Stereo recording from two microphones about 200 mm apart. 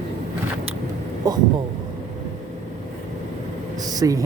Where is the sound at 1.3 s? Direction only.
20° right (ahead or behind).